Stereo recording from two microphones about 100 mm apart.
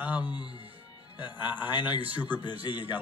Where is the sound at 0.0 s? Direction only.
15° right (ahead or behind).